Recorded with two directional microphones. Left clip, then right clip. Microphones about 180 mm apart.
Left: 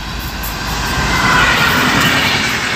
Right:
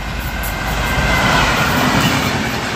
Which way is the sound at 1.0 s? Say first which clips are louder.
Left 3 dB; 65° right (ahead or behind).